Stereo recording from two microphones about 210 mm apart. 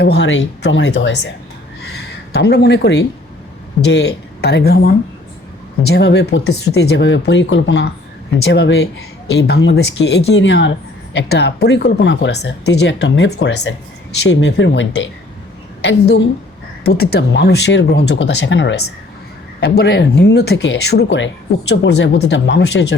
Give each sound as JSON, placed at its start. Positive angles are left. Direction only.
{"t": 0.0, "sound": "speech", "side_deg": 55}
{"t": 2.3, "sound": "speech", "side_deg": 50}
{"t": 5.8, "sound": "speech", "side_deg": 55}
{"t": 16.8, "sound": "speech", "side_deg": 50}